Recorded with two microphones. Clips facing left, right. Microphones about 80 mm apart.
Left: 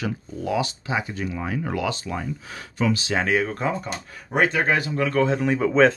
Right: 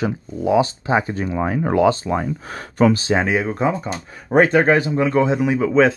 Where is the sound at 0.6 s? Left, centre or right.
Right.